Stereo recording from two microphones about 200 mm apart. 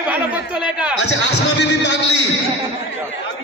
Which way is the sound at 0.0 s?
5° right (ahead or behind).